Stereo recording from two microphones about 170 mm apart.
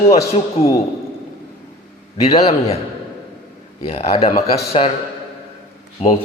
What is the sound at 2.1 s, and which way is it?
Speech, 35° left (ahead or behind).